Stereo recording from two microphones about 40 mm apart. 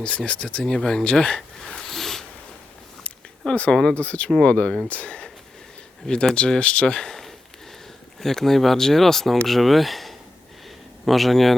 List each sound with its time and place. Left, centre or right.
0.0 s speech: left
1.4 s a sound: centre
3.7 s speech: centre
3.9 s speech: left
8.2 s speech: centre